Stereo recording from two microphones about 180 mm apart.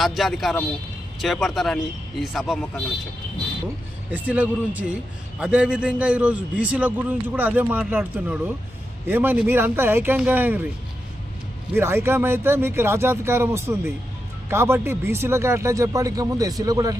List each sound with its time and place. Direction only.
0.0 s speech: centre (ahead or behind)
4.1 s a man's voice: 10° right (ahead or behind)
11.7 s a man's voice: 15° right (ahead or behind)